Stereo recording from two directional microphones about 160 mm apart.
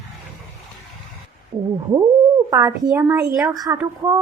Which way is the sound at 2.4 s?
20° right (ahead or behind).